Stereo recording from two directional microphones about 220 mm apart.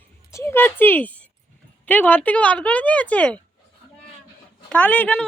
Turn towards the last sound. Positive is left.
turn(degrees=5)  # may be behind; listen again after turning